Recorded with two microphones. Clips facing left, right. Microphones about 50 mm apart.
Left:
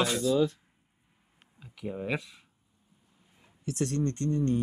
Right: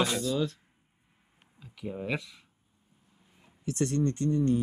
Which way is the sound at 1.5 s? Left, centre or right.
Centre.